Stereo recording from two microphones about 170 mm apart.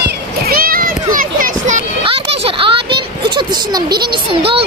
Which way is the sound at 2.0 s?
30° right (ahead or behind).